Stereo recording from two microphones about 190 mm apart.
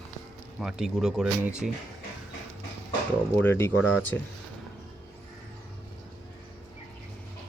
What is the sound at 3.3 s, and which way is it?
Speech, 10° left (ahead or behind).